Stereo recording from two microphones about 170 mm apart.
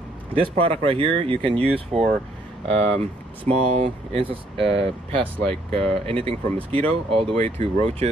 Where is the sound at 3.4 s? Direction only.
35° right (ahead or behind).